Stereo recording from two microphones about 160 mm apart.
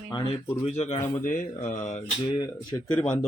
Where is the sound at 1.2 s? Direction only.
55° left (ahead or behind).